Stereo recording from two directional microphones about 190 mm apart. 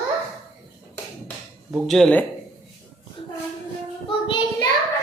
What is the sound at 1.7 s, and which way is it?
Speech, centre (ahead or behind).